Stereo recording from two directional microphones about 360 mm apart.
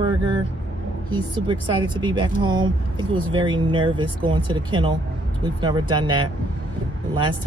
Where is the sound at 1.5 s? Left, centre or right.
Centre.